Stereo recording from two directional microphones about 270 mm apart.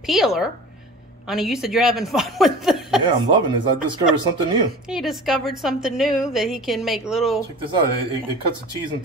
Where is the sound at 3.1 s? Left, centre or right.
Centre.